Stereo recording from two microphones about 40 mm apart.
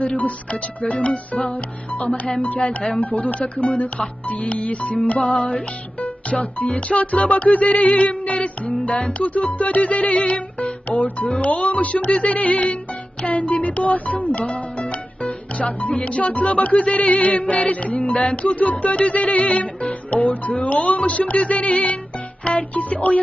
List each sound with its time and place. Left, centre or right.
0.0 s speech: left